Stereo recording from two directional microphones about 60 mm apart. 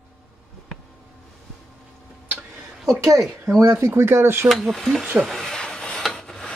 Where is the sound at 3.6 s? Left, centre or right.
Right.